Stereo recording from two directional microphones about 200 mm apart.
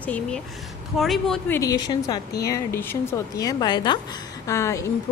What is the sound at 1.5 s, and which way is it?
A woman's voice, 20° left (ahead or behind).